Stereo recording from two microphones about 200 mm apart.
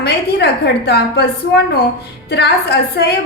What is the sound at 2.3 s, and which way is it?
Speech, 55° left (ahead or behind).